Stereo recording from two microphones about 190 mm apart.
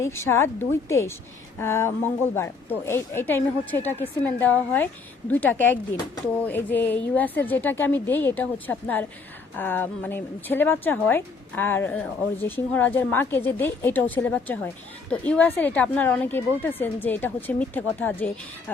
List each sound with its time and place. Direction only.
0.0 s a woman's voice: 15° left (ahead or behind)